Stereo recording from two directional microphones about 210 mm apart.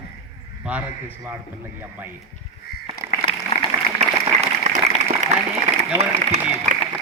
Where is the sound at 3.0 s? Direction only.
40° left (ahead or behind).